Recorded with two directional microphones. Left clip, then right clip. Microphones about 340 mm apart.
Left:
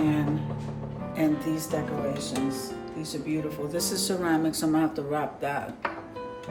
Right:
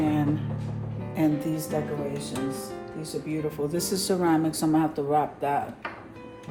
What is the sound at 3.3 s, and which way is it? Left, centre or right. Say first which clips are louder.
Speech: right 1 dB; centre.